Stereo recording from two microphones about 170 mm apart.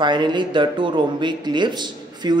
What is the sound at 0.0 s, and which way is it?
Speech, 25° right (ahead or behind).